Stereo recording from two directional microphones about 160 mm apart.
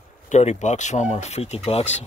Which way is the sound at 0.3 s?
45° left (ahead or behind).